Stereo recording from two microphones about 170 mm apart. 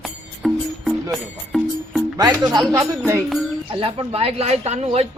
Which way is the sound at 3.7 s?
30° right (ahead or behind).